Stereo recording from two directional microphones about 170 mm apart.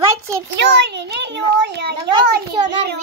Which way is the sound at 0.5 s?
90° right.